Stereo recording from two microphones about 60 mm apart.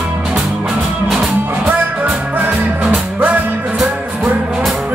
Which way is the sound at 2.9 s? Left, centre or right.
Right.